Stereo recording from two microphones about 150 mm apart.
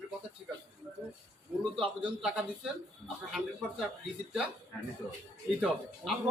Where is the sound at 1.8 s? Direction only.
5° right (ahead or behind).